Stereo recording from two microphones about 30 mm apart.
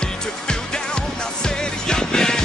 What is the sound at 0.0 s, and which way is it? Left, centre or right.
Music, left.